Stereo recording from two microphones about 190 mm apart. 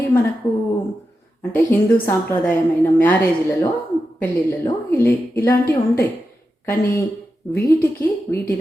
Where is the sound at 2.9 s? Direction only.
10° left (ahead or behind).